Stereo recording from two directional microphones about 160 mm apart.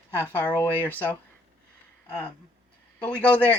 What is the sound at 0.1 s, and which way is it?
Speech, 10° left (ahead or behind).